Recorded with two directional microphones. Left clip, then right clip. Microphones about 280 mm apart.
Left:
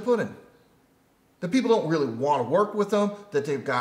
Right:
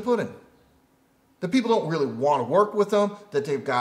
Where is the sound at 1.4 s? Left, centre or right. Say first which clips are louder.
Even; right.